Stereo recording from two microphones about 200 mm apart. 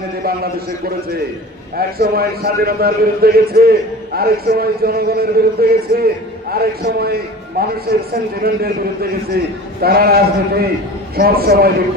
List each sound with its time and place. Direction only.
0.2 s a man's voice: 50° right (ahead or behind)